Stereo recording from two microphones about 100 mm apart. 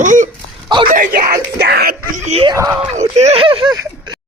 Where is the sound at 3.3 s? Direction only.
65° right (ahead or behind).